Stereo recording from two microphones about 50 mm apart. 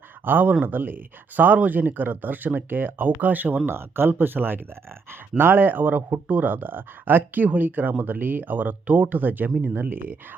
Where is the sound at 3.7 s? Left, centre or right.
Right.